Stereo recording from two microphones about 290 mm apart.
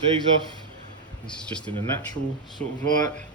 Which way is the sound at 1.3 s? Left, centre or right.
Centre.